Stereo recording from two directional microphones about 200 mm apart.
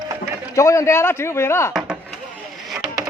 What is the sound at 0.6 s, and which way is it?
Speech, 15° left (ahead or behind).